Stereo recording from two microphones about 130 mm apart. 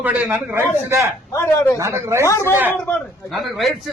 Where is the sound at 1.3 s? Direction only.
20° left (ahead or behind).